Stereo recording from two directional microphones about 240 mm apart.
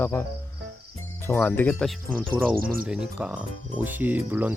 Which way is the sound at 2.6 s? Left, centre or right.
Right.